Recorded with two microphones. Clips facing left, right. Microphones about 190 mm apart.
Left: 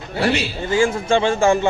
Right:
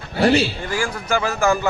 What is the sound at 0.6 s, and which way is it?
A man's voice, 25° left (ahead or behind).